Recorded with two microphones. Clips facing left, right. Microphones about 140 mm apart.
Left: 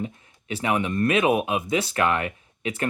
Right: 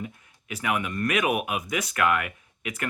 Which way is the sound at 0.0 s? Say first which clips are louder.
Left 5 dB; 30° left (ahead or behind).